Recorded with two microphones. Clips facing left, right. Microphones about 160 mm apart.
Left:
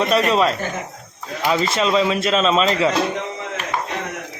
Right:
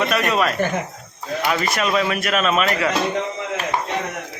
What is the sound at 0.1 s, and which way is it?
Speech, 30° left (ahead or behind).